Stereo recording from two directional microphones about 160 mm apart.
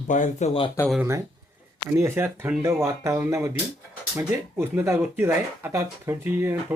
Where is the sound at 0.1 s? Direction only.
50° left (ahead or behind).